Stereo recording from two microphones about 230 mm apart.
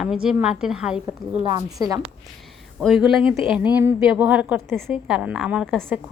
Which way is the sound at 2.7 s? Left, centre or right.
Centre.